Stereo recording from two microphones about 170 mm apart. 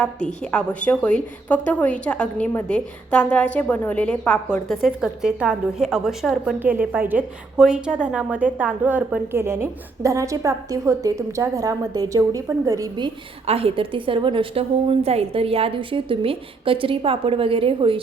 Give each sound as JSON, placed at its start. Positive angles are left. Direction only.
{"t": 0.5, "sound": "a woman's voice", "side_deg": 10}
{"t": 13.5, "sound": "a woman's voice", "side_deg": -35}